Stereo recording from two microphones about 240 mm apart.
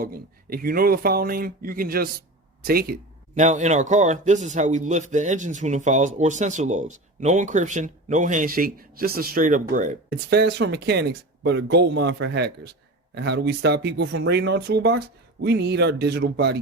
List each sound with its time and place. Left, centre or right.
0.0 s speech: right
10.2 s speech: right